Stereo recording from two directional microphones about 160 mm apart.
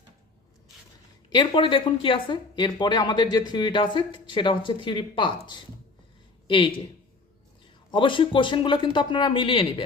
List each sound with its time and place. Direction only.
1.3 s speech: 30° left (ahead or behind)
6.5 s speech: 30° left (ahead or behind)
7.9 s speech: 30° left (ahead or behind)